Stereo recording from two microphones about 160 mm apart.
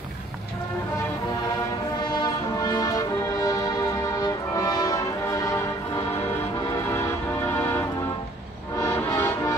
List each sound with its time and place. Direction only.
2.0 s music: 25° left (ahead or behind)
6.9 s music: 15° left (ahead or behind)